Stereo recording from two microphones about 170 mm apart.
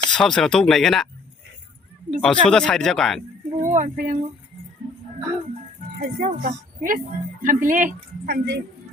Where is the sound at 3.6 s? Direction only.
45° right (ahead or behind).